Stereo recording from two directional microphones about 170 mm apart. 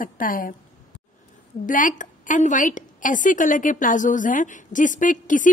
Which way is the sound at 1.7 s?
50° left (ahead or behind).